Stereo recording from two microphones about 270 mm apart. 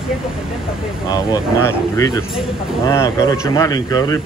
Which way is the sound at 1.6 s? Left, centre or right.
Centre.